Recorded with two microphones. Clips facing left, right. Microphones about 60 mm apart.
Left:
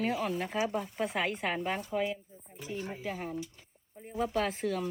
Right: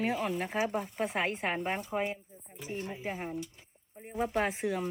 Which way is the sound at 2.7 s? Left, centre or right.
Right.